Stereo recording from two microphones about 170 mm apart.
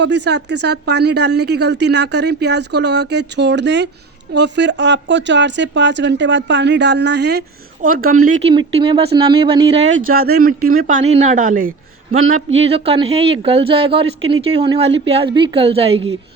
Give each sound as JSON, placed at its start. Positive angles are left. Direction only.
{"t": 0.0, "sound": "speech", "side_deg": -90}
{"t": 7.8, "sound": "speech", "side_deg": -55}
{"t": 8.4, "sound": "speech", "side_deg": -30}
{"t": 10.2, "sound": "speech", "side_deg": -65}
{"t": 12.6, "sound": "speech", "side_deg": -35}
{"t": 14.8, "sound": "speech", "side_deg": -90}
{"t": 15.1, "sound": "speech", "side_deg": -30}